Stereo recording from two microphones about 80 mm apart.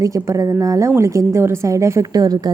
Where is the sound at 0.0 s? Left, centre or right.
Right.